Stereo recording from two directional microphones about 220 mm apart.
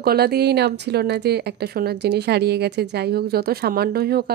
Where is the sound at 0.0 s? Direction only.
45° right (ahead or behind).